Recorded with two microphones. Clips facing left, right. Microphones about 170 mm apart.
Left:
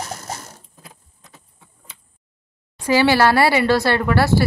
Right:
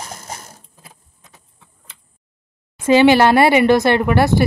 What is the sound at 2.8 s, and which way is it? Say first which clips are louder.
Speech: right 5 dB; 20° right (ahead or behind).